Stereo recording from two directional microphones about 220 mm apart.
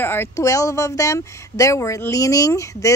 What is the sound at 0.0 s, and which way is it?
Speech, 10° left (ahead or behind).